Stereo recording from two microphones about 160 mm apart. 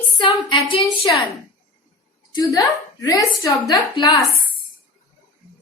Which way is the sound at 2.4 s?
25° left (ahead or behind).